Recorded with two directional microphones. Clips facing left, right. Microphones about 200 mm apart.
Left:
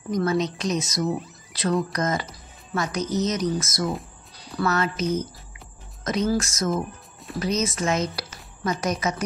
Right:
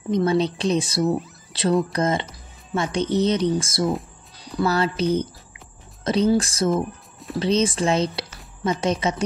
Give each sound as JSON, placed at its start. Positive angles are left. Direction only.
{"t": 0.1, "sound": "a woman's voice", "side_deg": -30}
{"t": 6.7, "sound": "music", "side_deg": 0}
{"t": 7.3, "sound": "a woman's voice", "side_deg": -30}